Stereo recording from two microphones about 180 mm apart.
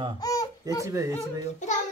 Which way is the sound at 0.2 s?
20° left (ahead or behind).